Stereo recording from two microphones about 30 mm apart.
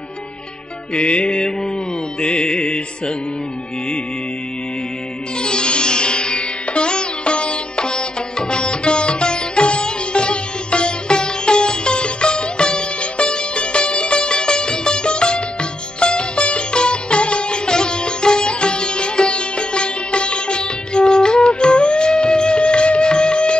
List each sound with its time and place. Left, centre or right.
0.9 s music: left
5.4 s music: left
17.6 s sitar: left